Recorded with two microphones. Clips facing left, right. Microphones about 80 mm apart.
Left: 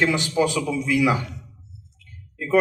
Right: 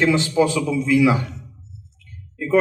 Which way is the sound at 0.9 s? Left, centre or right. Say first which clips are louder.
Right 4 dB; right.